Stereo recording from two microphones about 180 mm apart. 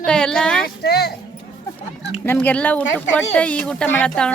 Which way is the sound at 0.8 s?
60° left (ahead or behind).